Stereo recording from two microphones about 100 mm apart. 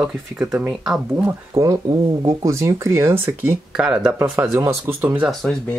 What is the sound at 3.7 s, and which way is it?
Speech, 10° right (ahead or behind).